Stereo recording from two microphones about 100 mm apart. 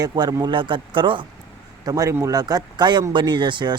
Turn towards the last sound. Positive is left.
turn(degrees=-50)  # may be behind; listen again after turning